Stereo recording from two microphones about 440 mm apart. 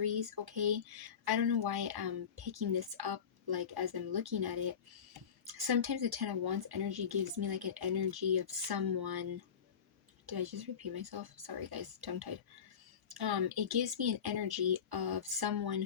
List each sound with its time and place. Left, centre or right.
0.0 s a sound: right
1.2 s speech: right
10.2 s speech: right